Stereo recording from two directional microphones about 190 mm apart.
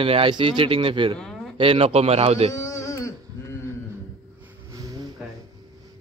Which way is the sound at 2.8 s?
15° left (ahead or behind).